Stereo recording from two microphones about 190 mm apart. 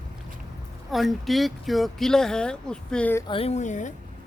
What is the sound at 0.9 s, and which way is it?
Speech, centre (ahead or behind).